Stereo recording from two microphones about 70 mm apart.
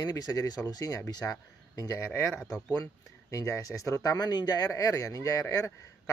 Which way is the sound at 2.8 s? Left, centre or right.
Left.